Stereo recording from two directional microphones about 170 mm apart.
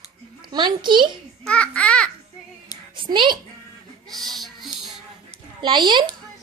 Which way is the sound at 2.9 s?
30° right (ahead or behind).